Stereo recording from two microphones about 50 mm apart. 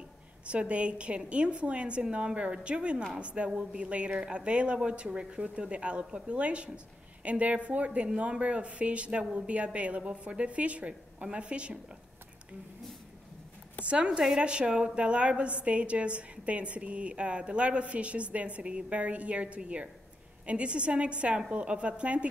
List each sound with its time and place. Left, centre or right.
0.5 s a woman's voice: right
13.8 s a woman's voice: right